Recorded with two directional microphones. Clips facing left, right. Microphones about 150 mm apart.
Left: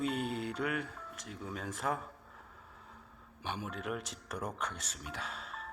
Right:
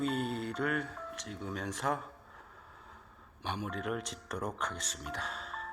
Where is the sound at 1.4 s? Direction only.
5° left (ahead or behind).